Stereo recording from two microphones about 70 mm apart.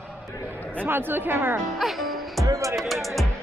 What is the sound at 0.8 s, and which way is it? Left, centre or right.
Speech, right.